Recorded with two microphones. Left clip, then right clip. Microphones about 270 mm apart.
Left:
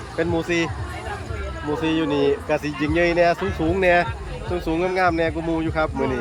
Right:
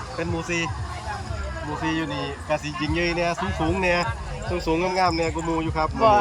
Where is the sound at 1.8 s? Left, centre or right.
Centre.